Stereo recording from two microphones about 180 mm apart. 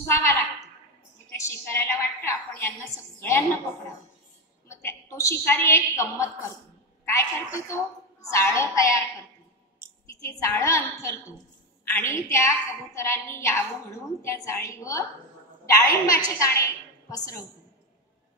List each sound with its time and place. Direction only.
0.1 s a woman's voice: 15° left (ahead or behind)
4.6 s a woman's voice: 15° left (ahead or behind)
10.2 s a woman's voice: 15° left (ahead or behind)